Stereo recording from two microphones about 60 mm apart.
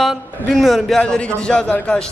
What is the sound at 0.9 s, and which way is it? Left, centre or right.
Speech, centre.